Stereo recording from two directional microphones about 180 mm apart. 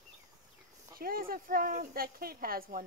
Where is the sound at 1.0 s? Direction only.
55° right (ahead or behind).